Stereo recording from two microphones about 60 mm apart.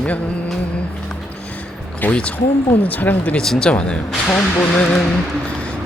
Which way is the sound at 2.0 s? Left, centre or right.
Left.